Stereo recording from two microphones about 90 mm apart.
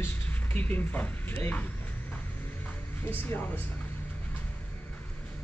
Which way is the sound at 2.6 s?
20° left (ahead or behind).